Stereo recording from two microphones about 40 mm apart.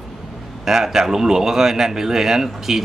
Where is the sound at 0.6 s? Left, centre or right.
Centre.